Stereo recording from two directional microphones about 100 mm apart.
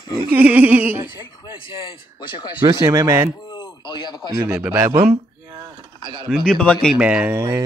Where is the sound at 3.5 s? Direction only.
50° left (ahead or behind).